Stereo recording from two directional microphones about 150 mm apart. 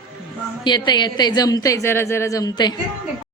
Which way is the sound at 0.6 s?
30° left (ahead or behind).